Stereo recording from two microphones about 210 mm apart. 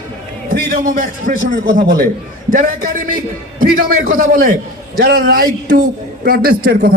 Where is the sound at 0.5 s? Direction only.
45° right (ahead or behind).